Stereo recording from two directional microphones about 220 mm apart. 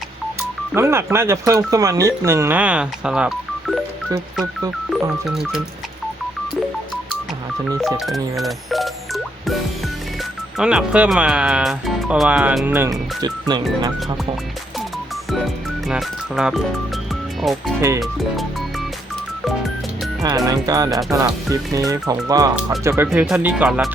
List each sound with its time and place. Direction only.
0.7 s speech: 10° right (ahead or behind)
7.8 s telephone dialing: centre (ahead or behind)
10.6 s speech: 5° right (ahead or behind)
15.9 s speech: centre (ahead or behind)
17.7 s speech: 15° right (ahead or behind)
20.2 s speech: 15° right (ahead or behind)